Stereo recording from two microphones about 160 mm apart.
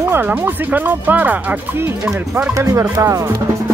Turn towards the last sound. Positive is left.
turn(degrees=-15)  # may be behind; listen again after turning